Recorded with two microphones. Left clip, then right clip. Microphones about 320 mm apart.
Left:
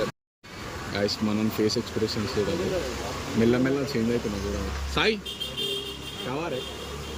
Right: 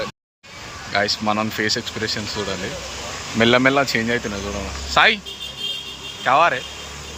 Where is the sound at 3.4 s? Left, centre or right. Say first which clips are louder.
Right 10 dB; right.